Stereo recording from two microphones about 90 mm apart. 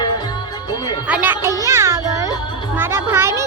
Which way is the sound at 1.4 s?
35° right (ahead or behind).